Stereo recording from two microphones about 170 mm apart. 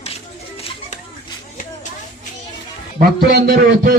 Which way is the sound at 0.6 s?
35° left (ahead or behind).